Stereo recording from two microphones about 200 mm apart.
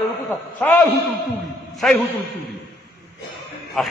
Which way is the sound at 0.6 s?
10° left (ahead or behind).